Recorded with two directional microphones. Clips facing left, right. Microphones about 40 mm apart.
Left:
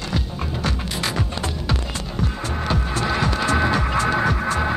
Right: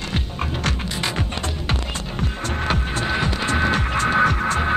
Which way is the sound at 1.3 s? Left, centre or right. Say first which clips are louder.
Even; right.